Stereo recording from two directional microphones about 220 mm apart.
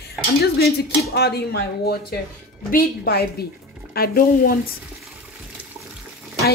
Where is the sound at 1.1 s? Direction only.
45° left (ahead or behind).